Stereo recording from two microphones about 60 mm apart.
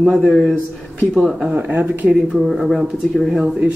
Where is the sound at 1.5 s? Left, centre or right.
Right.